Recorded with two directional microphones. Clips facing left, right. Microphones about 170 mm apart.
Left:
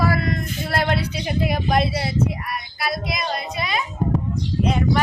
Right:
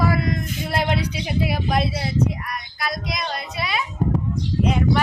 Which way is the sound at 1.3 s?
5° right (ahead or behind).